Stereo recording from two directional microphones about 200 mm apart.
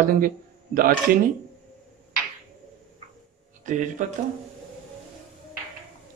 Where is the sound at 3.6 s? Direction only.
40° right (ahead or behind).